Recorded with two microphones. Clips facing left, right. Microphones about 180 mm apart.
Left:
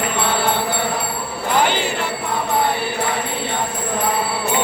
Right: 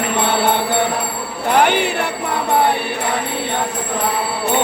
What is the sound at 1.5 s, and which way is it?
Jingle bell, 60° right (ahead or behind).